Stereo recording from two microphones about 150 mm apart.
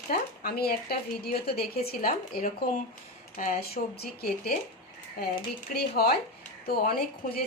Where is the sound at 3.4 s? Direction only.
80° left.